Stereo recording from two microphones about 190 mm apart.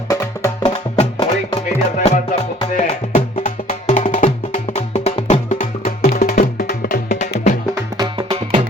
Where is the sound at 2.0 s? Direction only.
40° left (ahead or behind).